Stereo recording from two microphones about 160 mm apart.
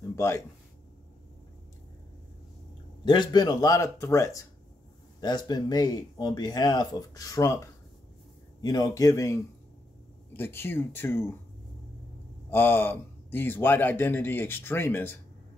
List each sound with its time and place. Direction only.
0.1 s a sound: 15° left (ahead or behind)
3.1 s a man's voice: 25° left (ahead or behind)
12.4 s a man's voice: 15° left (ahead or behind)